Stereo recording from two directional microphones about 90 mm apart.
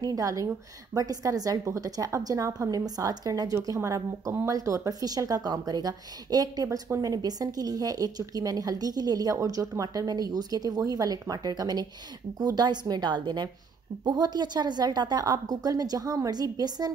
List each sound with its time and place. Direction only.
0.0 s a woman's voice: 40° right (ahead or behind)